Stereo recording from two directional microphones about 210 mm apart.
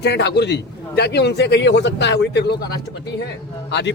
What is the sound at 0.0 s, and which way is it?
A man's voice, 50° left (ahead or behind).